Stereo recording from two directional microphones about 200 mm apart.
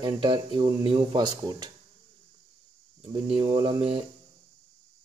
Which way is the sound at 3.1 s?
25° right (ahead or behind).